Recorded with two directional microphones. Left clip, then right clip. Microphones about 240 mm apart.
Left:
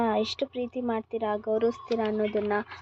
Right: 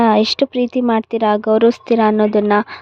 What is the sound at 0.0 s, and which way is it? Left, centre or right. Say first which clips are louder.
Speech: right 14 dB; right.